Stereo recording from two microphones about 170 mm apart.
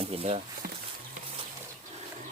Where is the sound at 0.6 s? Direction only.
65° right (ahead or behind).